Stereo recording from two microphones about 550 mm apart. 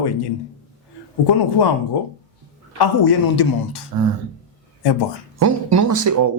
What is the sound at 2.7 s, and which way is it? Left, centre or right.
Speech, left.